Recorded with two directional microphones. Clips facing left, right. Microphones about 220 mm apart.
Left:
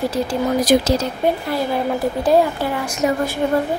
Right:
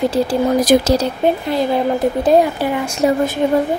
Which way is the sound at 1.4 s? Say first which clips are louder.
Right 4 dB; 20° right (ahead or behind).